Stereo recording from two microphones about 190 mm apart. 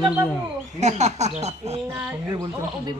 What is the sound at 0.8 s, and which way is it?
Speech, 35° right (ahead or behind).